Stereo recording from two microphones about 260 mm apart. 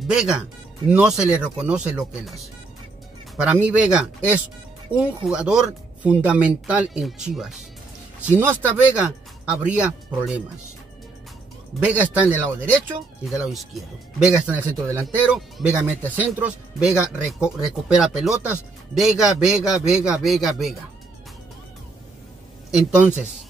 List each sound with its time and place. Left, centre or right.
0.1 s speech: centre
3.3 s speech: centre
11.8 s speech: centre
22.7 s speech: centre